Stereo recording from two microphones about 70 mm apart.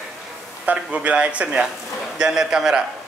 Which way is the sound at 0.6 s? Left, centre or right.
Right.